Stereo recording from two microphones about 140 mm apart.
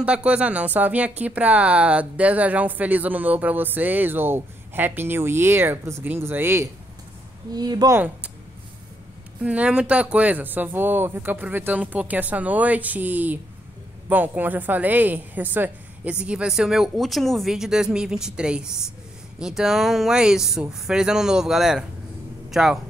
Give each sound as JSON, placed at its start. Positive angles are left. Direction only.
{"t": 0.0, "sound": "a woman's voice", "side_deg": -10}
{"t": 7.5, "sound": "speech", "side_deg": -30}
{"t": 9.4, "sound": "a woman's voice", "side_deg": -10}